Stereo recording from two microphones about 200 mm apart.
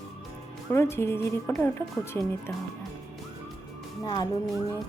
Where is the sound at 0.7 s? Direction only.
15° left (ahead or behind).